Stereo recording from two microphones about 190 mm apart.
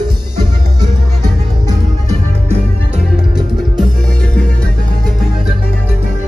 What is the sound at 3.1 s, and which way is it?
Music, 5° right (ahead or behind).